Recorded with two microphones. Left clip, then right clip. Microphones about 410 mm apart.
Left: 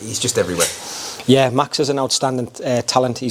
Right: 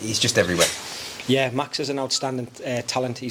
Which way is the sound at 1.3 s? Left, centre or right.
Left.